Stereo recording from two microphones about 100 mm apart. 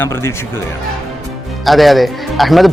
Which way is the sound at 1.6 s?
Centre (ahead or behind).